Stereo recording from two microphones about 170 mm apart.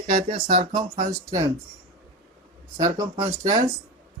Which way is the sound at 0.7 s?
50° right (ahead or behind).